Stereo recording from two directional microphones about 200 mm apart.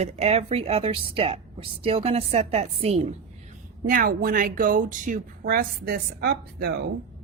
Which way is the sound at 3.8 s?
45° right (ahead or behind).